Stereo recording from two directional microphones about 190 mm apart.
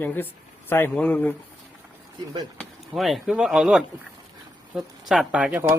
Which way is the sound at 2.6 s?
Centre (ahead or behind).